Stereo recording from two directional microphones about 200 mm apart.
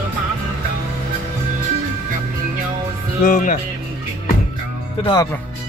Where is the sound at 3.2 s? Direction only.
45° left (ahead or behind).